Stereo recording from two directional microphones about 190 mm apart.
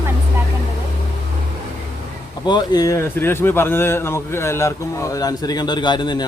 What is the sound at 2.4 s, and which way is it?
Speech, 20° left (ahead or behind).